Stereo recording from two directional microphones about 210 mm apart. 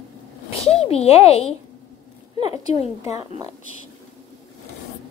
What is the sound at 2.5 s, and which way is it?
Speech, 30° left (ahead or behind).